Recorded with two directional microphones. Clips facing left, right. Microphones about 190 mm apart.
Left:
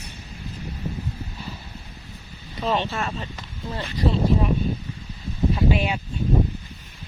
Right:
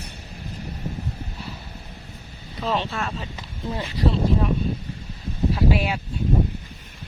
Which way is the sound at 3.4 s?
10° right (ahead or behind).